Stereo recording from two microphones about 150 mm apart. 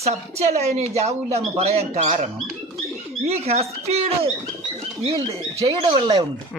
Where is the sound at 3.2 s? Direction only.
45° right (ahead or behind).